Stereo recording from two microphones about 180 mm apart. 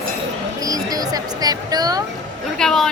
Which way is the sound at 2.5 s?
Centre (ahead or behind).